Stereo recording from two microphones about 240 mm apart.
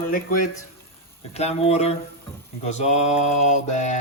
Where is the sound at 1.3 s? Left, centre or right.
Left.